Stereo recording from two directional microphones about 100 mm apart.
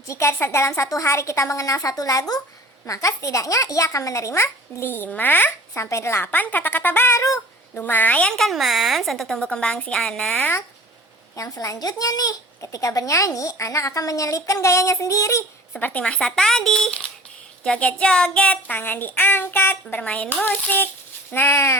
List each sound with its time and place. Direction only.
0.1 s a child's voice: 25° left (ahead or behind)
7.8 s a woman's voice: 20° left (ahead or behind)
11.3 s speech: 35° left (ahead or behind)
15.7 s a woman's voice: 15° left (ahead or behind)